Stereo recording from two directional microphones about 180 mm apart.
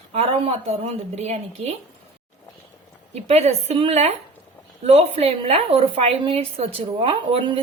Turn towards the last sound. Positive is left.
turn(degrees=-30)  # may be behind; listen again after turning